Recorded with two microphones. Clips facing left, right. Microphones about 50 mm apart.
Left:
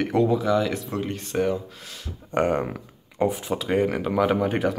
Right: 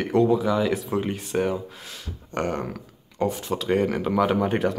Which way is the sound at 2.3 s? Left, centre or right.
Centre.